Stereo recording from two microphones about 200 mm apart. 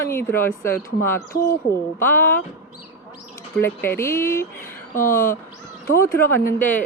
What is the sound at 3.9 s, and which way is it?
Speech, 10° left (ahead or behind).